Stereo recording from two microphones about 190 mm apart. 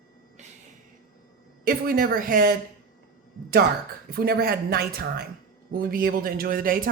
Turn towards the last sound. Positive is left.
turn(degrees=-50)  # may be behind; listen again after turning